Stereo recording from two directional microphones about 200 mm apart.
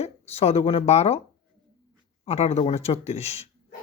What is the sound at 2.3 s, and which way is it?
Speech, 30° left (ahead or behind).